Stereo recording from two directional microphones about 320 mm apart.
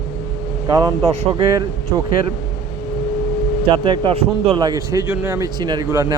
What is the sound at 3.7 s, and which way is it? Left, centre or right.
A man's voice, centre.